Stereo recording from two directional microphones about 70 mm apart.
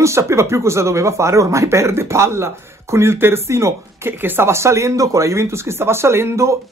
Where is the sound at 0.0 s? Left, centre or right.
Right.